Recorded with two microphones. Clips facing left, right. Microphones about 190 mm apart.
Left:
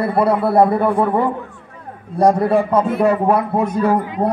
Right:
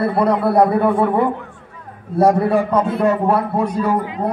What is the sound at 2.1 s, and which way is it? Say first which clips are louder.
Speech: even; 5° right (ahead or behind).